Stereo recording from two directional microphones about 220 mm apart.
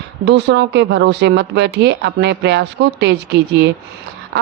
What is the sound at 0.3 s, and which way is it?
Speech, 50° right (ahead or behind).